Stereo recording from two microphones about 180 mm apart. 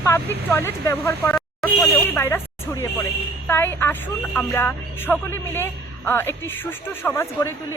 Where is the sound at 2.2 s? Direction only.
15° left (ahead or behind).